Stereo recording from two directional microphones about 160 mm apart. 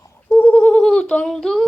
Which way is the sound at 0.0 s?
15° left (ahead or behind).